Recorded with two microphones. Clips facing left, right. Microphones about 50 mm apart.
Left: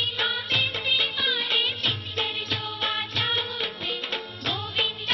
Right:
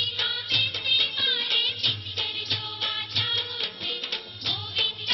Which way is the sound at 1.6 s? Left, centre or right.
Left.